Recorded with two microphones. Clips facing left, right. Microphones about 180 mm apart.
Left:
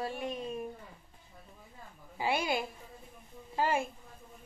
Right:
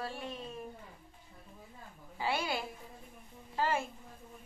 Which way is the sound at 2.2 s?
15° left (ahead or behind).